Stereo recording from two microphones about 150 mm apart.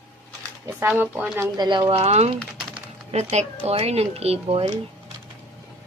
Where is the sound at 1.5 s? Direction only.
25° right (ahead or behind).